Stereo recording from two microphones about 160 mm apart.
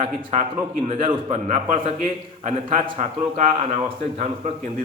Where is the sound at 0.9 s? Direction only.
45° right (ahead or behind).